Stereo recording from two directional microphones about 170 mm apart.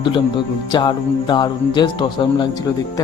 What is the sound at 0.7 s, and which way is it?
Speech, 25° left (ahead or behind).